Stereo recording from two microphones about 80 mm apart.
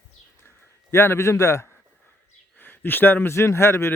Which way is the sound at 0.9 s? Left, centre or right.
Left.